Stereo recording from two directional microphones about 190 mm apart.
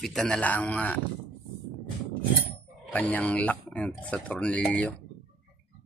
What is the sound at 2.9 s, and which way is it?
Speech, 5° left (ahead or behind).